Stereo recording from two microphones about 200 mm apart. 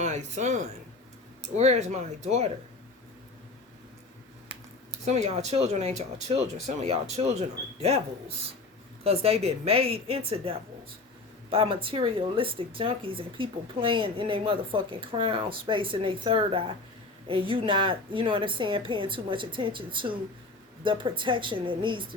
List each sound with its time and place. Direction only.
0.0 s speech: 35° right (ahead or behind)
5.0 s speech: 35° right (ahead or behind)
9.0 s speech: 30° right (ahead or behind)